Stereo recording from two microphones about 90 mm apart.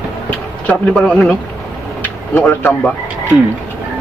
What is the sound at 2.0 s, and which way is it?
Vehicle, 20° left (ahead or behind).